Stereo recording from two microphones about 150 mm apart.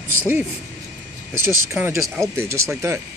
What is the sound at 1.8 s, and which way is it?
Speech, 15° right (ahead or behind).